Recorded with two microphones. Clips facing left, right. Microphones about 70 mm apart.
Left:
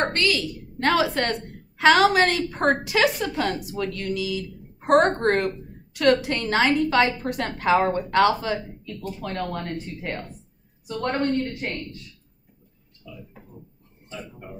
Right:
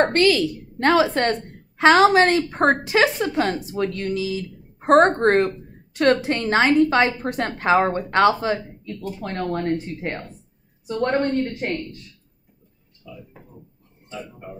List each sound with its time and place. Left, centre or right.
0.1 s a woman's voice: right